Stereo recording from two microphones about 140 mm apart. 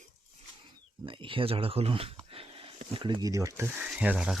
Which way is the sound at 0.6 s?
35° right (ahead or behind).